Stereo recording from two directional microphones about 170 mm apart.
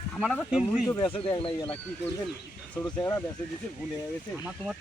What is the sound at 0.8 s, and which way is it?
Speech, 25° left (ahead or behind).